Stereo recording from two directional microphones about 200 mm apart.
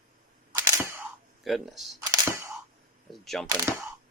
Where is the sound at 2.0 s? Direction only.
20° right (ahead or behind).